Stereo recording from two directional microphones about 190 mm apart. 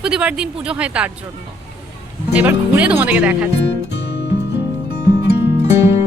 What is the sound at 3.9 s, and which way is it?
Music, 65° left (ahead or behind).